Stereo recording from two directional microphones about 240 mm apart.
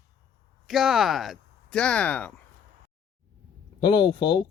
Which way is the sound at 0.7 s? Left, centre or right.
Centre.